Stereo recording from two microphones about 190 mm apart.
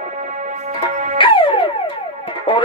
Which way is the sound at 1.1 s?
25° left (ahead or behind).